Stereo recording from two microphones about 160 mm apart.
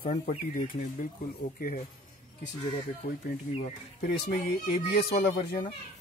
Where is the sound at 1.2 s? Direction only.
65° left (ahead or behind).